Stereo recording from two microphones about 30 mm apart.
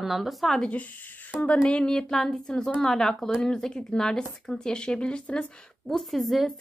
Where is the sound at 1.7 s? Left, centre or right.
Left.